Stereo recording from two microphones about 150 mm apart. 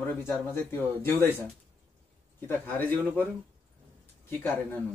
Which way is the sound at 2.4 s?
10° left (ahead or behind).